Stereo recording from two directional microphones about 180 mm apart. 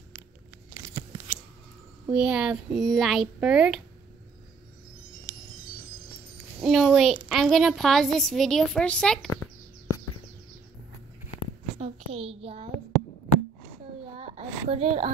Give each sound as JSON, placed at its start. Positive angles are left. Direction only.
{"t": 2.0, "sound": "a woman's voice", "side_deg": -5}
{"t": 6.6, "sound": "a woman's voice", "side_deg": 0}
{"t": 11.8, "sound": "a child's voice", "side_deg": -35}
{"t": 14.1, "sound": "speech", "side_deg": -35}